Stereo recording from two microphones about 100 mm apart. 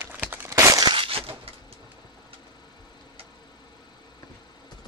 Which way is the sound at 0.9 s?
65° right (ahead or behind).